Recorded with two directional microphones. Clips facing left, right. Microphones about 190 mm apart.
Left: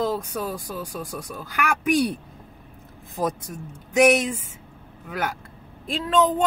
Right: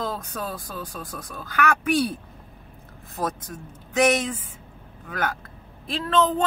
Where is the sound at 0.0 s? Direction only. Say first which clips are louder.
Left 5 dB; 10° left (ahead or behind).